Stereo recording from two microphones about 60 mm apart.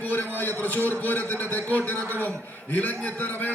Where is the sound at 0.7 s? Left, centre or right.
Right.